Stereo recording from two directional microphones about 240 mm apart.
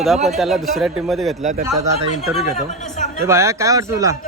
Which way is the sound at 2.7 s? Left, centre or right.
Left.